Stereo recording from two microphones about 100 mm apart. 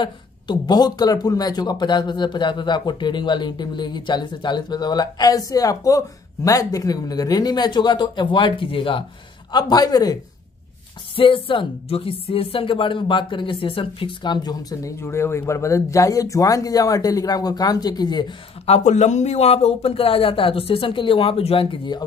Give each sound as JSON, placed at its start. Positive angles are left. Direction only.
{"t": 0.0, "sound": "speech", "side_deg": 50}
{"t": 9.5, "sound": "speech", "side_deg": 45}
{"t": 11.1, "sound": "speech", "side_deg": 60}
{"t": 18.7, "sound": "speech", "side_deg": 90}
{"t": 21.9, "sound": "speech", "side_deg": 45}